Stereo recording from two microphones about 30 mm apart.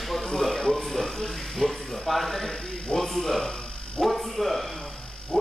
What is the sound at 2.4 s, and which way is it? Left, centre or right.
Snake, centre.